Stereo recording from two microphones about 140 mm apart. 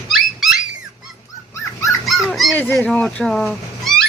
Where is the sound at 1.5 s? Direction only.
20° left (ahead or behind).